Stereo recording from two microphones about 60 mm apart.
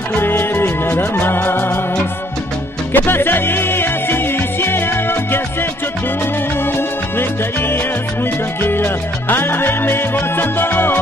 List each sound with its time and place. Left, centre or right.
0.1 s music: left
2.9 s music: left
8.6 s music: left